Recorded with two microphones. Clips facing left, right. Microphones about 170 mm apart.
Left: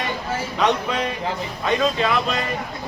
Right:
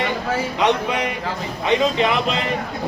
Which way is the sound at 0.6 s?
15° right (ahead or behind).